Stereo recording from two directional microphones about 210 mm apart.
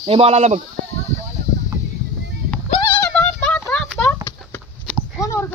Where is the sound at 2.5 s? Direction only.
5° left (ahead or behind).